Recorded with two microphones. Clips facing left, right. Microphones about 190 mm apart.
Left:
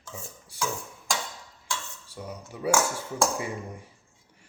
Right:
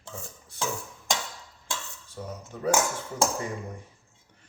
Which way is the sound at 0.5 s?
10° left (ahead or behind).